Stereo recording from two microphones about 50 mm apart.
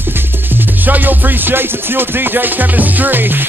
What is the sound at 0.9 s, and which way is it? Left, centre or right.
Music, right.